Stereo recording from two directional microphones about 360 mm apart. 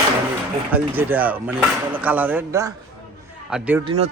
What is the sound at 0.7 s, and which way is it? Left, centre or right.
Speech, centre.